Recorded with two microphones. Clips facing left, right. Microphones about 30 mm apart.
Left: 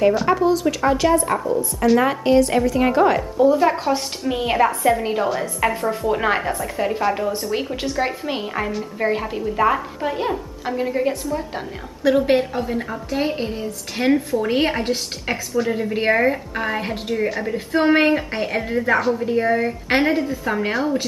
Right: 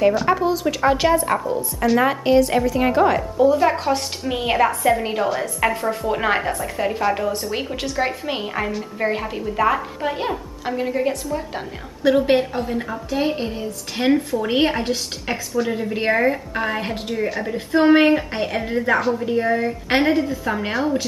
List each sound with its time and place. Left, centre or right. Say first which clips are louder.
0.0 s a woman's voice: left 1 dB; centre